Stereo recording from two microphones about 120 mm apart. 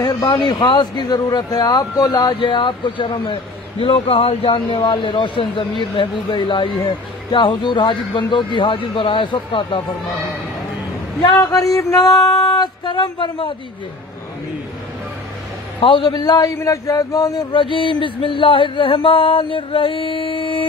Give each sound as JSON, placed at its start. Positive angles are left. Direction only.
{"t": 0.3, "sound": "music", "side_deg": 40}
{"t": 3.8, "sound": "a man's voice", "side_deg": 50}
{"t": 11.5, "sound": "music", "side_deg": 30}
{"t": 15.8, "sound": "a man's voice", "side_deg": 45}